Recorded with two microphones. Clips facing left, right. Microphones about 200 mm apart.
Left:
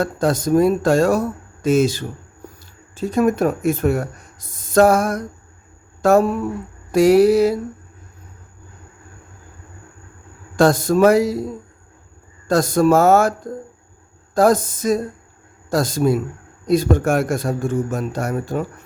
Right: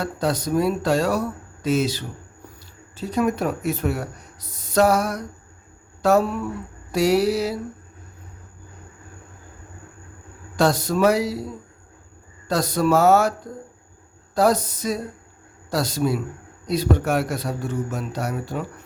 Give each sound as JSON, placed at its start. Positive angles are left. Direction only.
{"t": 0.0, "sound": "speech", "side_deg": 50}
{"t": 10.6, "sound": "speech", "side_deg": 50}
{"t": 12.5, "sound": "speech", "side_deg": 50}